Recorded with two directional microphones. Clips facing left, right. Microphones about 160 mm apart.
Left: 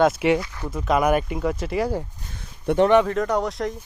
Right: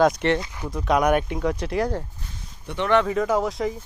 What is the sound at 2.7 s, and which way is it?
Speech, 55° left (ahead or behind).